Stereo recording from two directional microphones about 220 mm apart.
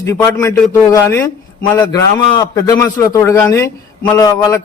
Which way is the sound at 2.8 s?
15° left (ahead or behind).